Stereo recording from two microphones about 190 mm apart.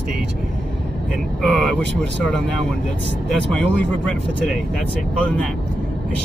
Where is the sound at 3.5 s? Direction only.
5° left (ahead or behind).